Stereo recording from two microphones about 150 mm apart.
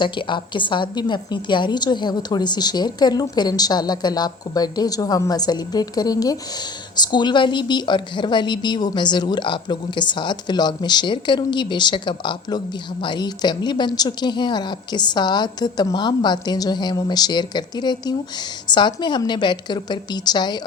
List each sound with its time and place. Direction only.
0.0 s a woman's voice: 30° left (ahead or behind)